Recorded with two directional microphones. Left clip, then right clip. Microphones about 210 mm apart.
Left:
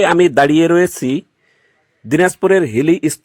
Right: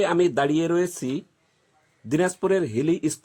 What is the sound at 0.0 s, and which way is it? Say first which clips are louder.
Speech: left 10 dB; 30° left (ahead or behind).